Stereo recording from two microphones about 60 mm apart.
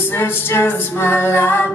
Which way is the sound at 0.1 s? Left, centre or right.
Left.